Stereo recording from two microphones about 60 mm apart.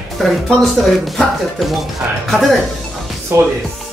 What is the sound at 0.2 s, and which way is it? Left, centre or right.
Speech, centre.